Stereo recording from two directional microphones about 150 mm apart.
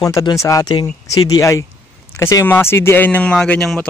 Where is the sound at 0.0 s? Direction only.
25° left (ahead or behind).